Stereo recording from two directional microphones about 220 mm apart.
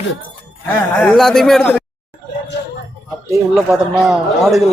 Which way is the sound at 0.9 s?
5° left (ahead or behind).